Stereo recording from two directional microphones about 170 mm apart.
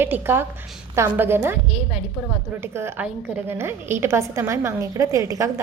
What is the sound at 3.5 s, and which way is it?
A woman's voice, 15° right (ahead or behind).